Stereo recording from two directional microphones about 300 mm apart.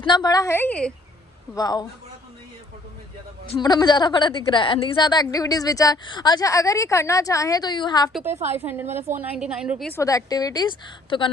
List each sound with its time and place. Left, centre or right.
0.0 s a woman's voice: centre
3.5 s a woman's voice: centre
8.3 s a woman's voice: right
8.5 s a woman's voice: centre